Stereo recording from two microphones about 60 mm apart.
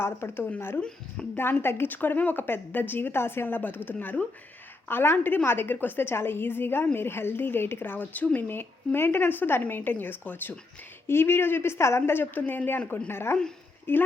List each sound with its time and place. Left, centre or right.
0.0 s a woman's voice: left
0.8 s speech: centre
1.4 s a woman's voice: left
4.9 s a woman's voice: left
12.1 s a woman's voice: left